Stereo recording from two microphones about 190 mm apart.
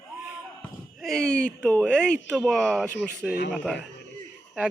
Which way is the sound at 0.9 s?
Centre (ahead or behind).